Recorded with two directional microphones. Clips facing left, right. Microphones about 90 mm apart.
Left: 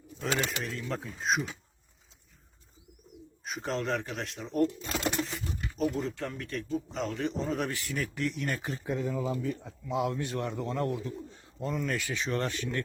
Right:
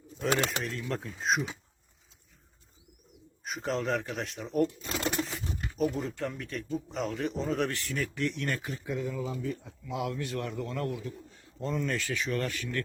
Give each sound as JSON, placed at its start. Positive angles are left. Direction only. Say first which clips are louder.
{"t": 0.6, "sound": "a man's voice", "louder": "right 1 dB", "side_deg": 0}
{"t": 3.4, "sound": "a man's voice", "louder": "right 1 dB", "side_deg": 0}
{"t": 5.7, "sound": "a man's voice", "louder": "even", "side_deg": 0}
{"t": 8.6, "sound": "a man's voice", "louder": "left 2 dB", "side_deg": 35}
{"t": 11.6, "sound": "a man's voice", "louder": "even", "side_deg": 0}
{"t": 12.0, "sound": "a man's voice", "louder": "even", "side_deg": 25}